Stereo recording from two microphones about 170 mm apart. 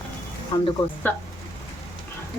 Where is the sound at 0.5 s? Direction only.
25° left (ahead or behind).